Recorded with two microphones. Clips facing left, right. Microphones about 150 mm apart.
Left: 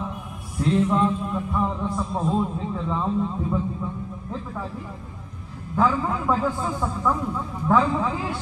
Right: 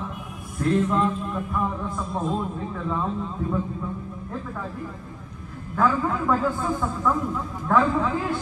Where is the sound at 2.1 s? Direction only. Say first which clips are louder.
Left 2 dB; centre (ahead or behind).